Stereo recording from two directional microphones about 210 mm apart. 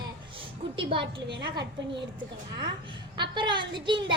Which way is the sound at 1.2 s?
55° right (ahead or behind).